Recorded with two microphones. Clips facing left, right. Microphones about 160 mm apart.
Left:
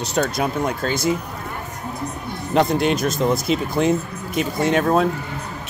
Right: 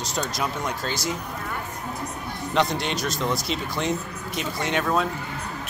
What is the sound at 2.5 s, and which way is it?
Speech, 50° left (ahead or behind).